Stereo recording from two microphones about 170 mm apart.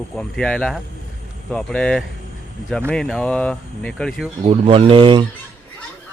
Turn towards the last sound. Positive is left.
turn(degrees=-30)  # may be behind; listen again after turning